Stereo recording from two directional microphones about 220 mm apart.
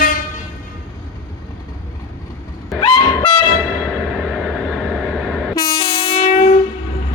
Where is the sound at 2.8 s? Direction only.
20° left (ahead or behind).